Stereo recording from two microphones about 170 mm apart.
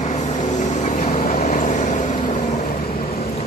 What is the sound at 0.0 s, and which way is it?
Vehicle, 45° left (ahead or behind).